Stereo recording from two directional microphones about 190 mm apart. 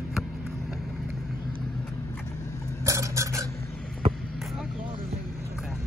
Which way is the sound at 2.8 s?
15° right (ahead or behind).